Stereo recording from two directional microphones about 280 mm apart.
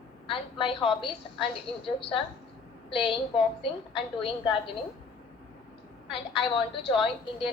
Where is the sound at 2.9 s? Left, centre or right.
Centre.